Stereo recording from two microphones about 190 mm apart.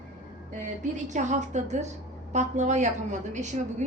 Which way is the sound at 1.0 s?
40° right (ahead or behind).